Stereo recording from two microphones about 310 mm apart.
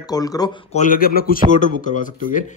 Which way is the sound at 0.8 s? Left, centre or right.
Left.